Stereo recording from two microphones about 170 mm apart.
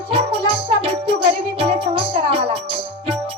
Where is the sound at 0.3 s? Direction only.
35° right (ahead or behind).